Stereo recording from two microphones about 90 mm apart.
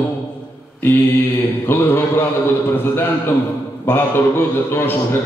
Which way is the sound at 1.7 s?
20° left (ahead or behind).